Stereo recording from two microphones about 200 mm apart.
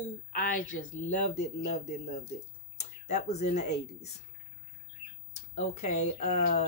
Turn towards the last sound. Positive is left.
turn(degrees=35)  # may be behind; listen again after turning